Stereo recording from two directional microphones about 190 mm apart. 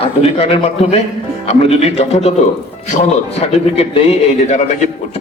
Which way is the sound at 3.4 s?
30° left (ahead or behind).